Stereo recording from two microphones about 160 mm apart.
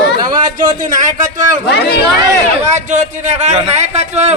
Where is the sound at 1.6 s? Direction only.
90° left.